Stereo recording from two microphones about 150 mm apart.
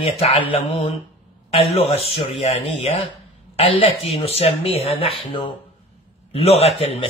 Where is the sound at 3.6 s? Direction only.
35° left (ahead or behind).